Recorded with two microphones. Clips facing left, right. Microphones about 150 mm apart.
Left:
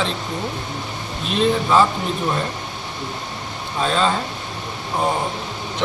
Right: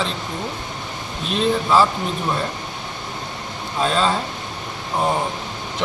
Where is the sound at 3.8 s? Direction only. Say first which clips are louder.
Even; centre (ahead or behind).